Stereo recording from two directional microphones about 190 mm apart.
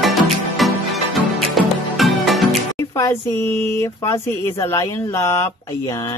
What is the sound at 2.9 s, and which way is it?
Speech, 15° left (ahead or behind).